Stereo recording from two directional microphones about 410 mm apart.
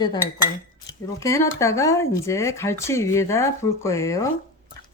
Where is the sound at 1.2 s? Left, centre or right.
Centre.